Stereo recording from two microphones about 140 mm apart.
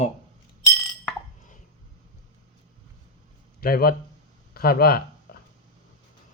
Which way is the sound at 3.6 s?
90° left.